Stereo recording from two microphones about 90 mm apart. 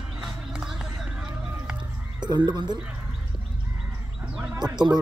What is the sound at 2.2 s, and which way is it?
Speech, 55° right (ahead or behind).